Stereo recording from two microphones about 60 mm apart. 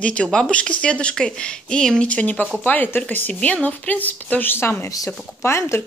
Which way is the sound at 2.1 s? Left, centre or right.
Left.